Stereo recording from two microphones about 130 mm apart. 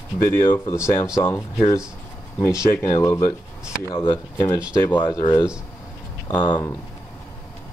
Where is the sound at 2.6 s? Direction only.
25° left (ahead or behind).